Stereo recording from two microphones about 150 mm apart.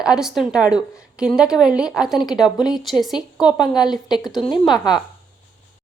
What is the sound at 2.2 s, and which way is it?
Speech, 25° left (ahead or behind).